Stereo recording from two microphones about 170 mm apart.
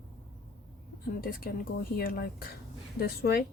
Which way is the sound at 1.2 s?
60° left (ahead or behind).